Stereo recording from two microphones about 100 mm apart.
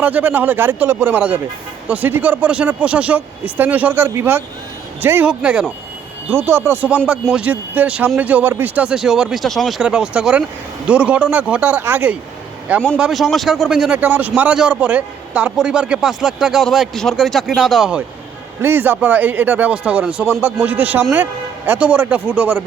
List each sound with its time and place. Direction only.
0.0 s a man's voice: 15° right (ahead or behind)
5.2 s a man's voice: 10° right (ahead or behind)
6.3 s a man's voice: 25° right (ahead or behind)
13.0 s speech: centre (ahead or behind)
14.0 s a man's voice: 15° right (ahead or behind)
18.6 s a man's voice: 20° right (ahead or behind)